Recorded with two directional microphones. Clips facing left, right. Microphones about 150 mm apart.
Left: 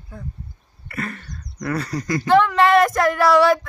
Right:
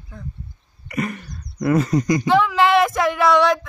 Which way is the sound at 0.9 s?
15° right (ahead or behind).